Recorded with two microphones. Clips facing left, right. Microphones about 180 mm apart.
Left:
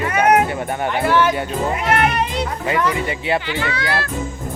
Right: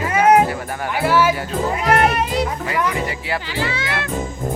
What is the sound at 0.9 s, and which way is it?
Speech, 5° right (ahead or behind).